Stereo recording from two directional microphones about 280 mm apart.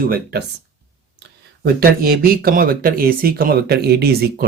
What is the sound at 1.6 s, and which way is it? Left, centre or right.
Speech, right.